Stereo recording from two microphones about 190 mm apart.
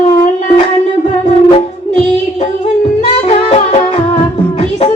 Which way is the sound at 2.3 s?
30° left (ahead or behind).